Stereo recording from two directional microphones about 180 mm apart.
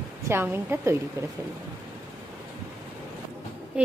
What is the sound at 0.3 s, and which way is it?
A woman's voice, 10° right (ahead or behind).